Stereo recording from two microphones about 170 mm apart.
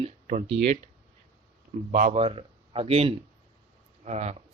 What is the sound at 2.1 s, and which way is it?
Speech, 35° right (ahead or behind).